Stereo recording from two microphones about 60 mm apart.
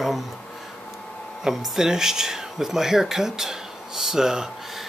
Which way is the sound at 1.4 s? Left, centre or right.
Centre.